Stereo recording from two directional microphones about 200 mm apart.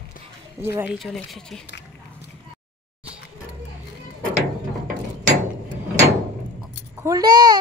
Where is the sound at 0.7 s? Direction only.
10° right (ahead or behind).